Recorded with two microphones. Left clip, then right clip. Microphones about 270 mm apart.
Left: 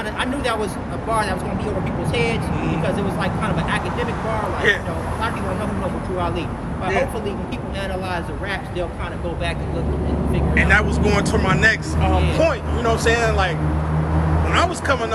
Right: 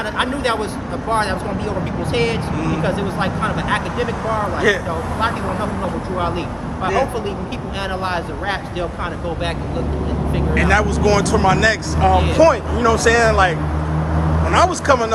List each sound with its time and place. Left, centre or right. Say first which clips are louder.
0.2 s speech: right 3 dB; centre
4.7 s speech: even; right
6.8 s speech: right 3 dB; centre
10.3 s speech: right 1 dB; centre
12.3 s speech: right 6 dB; right
14.5 s speech: right 5 dB; right